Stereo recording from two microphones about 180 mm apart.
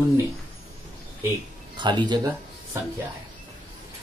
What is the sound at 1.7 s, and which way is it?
Speech, 25° right (ahead or behind).